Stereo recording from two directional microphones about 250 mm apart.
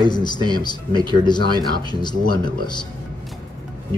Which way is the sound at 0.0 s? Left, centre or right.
Centre.